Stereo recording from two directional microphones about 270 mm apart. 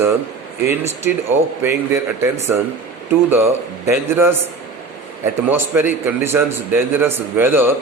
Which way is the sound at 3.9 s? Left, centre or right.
Centre.